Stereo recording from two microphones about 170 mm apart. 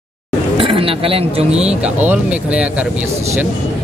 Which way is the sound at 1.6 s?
10° right (ahead or behind).